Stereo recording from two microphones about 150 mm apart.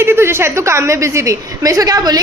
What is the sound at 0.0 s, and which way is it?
A woman's voice, 15° right (ahead or behind).